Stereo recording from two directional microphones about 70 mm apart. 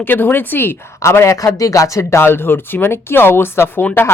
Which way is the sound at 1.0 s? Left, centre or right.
Left.